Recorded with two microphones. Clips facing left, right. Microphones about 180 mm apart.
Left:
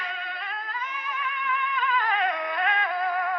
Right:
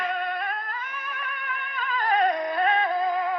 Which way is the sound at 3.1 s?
20° right (ahead or behind).